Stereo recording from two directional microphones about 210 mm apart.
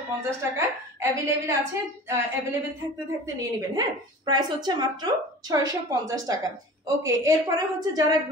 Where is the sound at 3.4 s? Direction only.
15° right (ahead or behind).